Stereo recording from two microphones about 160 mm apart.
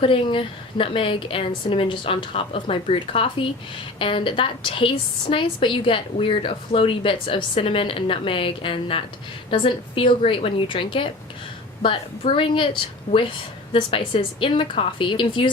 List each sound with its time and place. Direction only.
0.0 s a woman's voice: 35° left (ahead or behind)
13.1 s a woman's voice: 50° left (ahead or behind)
13.7 s a woman's voice: 30° left (ahead or behind)